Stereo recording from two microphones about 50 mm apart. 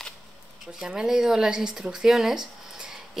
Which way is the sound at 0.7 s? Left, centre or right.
Centre.